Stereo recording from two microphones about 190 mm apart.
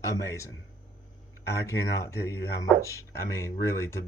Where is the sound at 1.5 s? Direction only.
15° left (ahead or behind).